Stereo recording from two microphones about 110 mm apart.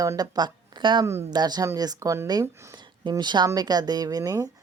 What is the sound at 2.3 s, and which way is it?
Speech, 40° right (ahead or behind).